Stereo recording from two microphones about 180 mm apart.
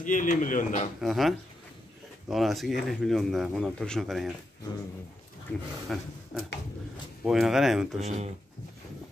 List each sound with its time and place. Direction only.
0.0 s speech: 45° left (ahead or behind)
1.0 s speech: centre (ahead or behind)
5.5 s speech: centre (ahead or behind)
8.0 s speech: 35° right (ahead or behind)